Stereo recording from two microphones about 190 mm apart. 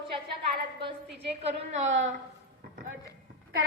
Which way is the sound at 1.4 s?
35° right (ahead or behind).